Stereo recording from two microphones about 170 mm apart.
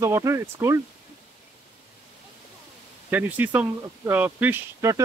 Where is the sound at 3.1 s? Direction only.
10° right (ahead or behind).